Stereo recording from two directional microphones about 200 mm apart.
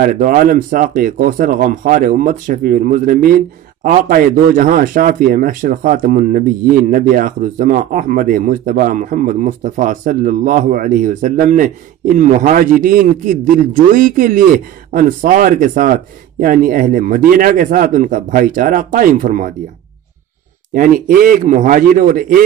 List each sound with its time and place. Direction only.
0.0 s speech: 45° right (ahead or behind)
20.7 s speech: 45° right (ahead or behind)